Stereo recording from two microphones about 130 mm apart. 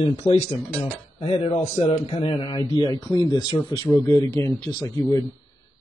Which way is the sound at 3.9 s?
20° left (ahead or behind).